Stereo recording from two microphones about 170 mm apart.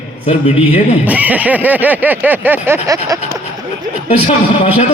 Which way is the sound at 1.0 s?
10° right (ahead or behind).